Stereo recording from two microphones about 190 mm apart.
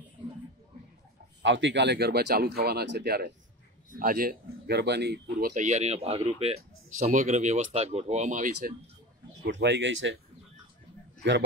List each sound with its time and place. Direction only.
1.4 s speech: 75° right (ahead or behind)
5.5 s speech: 40° right (ahead or behind)
9.5 s speech: 70° right (ahead or behind)